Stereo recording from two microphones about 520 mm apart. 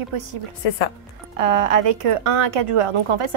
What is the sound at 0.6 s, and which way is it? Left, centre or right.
Speech, left.